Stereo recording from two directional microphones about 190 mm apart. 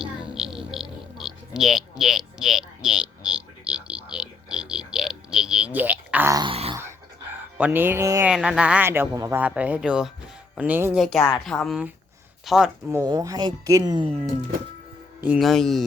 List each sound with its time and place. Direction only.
0.0 s a sound: centre (ahead or behind); by 6.7 s 30° right (ahead or behind)
7.6 s speech: 10° right (ahead or behind)
8.3 s speech: 5° right (ahead or behind)
10.9 s a woman's voice: centre (ahead or behind)
13.0 s speech: 20° right (ahead or behind)
15.2 s a woman's voice: 5° right (ahead or behind)